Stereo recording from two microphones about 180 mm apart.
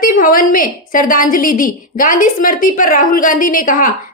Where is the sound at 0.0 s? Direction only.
50° left (ahead or behind).